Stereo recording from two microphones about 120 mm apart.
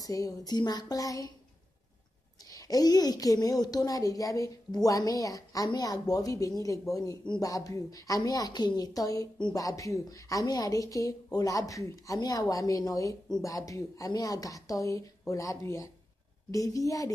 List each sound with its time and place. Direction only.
0.0 s speech: 30° left (ahead or behind)
2.4 s a woman's voice: 30° left (ahead or behind)